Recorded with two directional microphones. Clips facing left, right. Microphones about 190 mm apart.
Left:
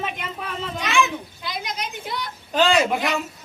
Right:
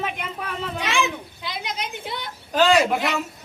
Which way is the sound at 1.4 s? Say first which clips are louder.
Right 2 dB; 25° right (ahead or behind).